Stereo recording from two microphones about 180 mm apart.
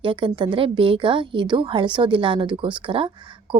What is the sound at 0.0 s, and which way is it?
A woman's voice, 30° right (ahead or behind).